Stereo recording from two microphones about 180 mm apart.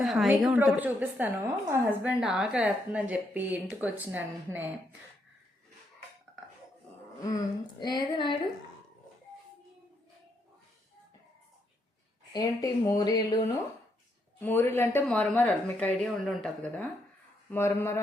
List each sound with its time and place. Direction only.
0.0 s a woman's voice: centre (ahead or behind)
7.2 s a woman's voice: 20° left (ahead or behind)
12.3 s a woman's voice: 20° left (ahead or behind)